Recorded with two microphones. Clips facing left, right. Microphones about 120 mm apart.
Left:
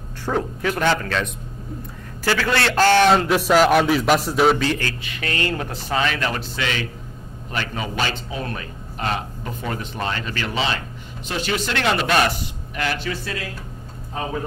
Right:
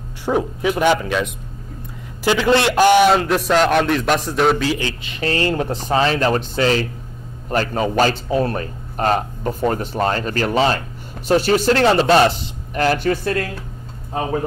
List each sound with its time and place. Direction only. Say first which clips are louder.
0.2 s speech: right 4 dB; 15° right (ahead or behind)
3.1 s a man's voice: right 1 dB; centre (ahead or behind)
4.7 s a man's voice: right 3 dB; 20° right (ahead or behind)
12.7 s a man's voice: right 8 dB; 40° right (ahead or behind)